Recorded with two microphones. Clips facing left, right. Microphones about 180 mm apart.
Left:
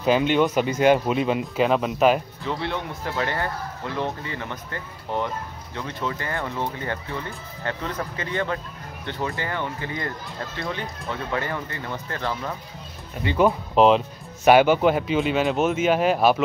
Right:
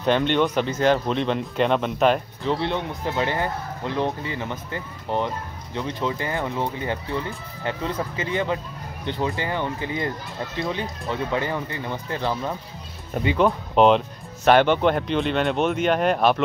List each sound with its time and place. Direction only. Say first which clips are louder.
0.0 s speech: left 1 dB; 5° left (ahead or behind)
3.1 s speech: right 2 dB; 20° right (ahead or behind)
13.1 s speech: right 5 dB; 50° right (ahead or behind)
13.7 s speech: right 1 dB; centre (ahead or behind)